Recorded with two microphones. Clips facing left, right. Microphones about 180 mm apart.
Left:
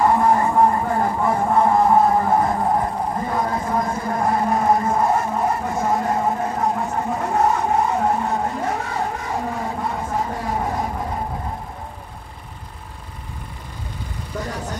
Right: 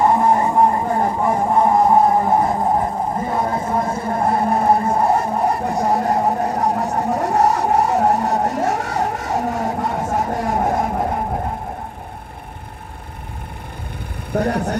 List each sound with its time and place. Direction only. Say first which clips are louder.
0.0 s vehicle: right 1 dB; 20° right (ahead or behind); by 8.8 s 45° right (ahead or behind)
8.9 s a sound: right 3 dB; 45° right (ahead or behind)
9.5 s vehicle: right 4 dB; 45° right (ahead or behind)
14.3 s vehicle: right 10 dB; 60° right (ahead or behind)